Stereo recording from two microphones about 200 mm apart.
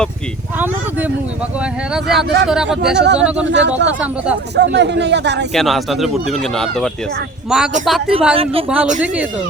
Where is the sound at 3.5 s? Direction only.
60° right (ahead or behind).